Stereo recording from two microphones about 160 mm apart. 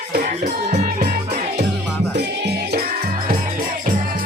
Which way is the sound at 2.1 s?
90° right.